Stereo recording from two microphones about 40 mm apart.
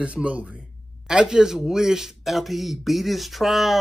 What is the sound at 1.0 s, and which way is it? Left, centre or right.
Speech, centre.